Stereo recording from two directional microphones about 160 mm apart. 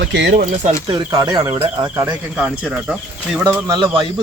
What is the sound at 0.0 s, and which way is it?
Speech, 90° right.